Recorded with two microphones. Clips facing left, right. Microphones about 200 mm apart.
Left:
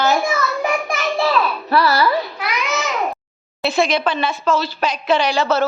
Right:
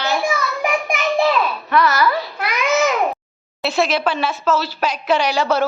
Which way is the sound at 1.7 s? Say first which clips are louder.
Left 1 dB; 35° left (ahead or behind).